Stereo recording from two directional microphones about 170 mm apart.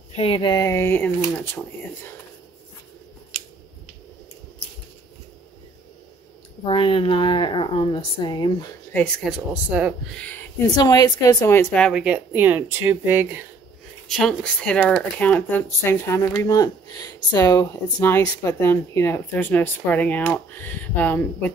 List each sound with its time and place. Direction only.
0.1 s speech: 35° left (ahead or behind); by 2.1 s 10° left (ahead or behind)
6.6 s speech: 30° left (ahead or behind)
8.9 s speech: 5° left (ahead or behind)
9.5 s speech: 5° right (ahead or behind)
10.1 s speech: 10° left (ahead or behind)
10.8 s speech: 25° left (ahead or behind); by 12.0 s 5° left (ahead or behind)
12.0 s speech: 10° right (ahead or behind)
14.0 s speech: centre (ahead or behind)